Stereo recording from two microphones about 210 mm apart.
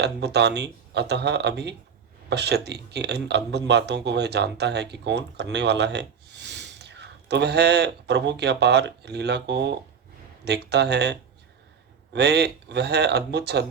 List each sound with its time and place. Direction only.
0.0 s speech: 55° right (ahead or behind)